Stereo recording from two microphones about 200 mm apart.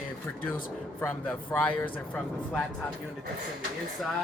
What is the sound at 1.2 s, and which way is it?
Speech, 5° left (ahead or behind).